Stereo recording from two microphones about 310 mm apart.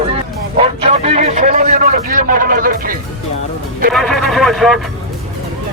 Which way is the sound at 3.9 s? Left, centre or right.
Centre.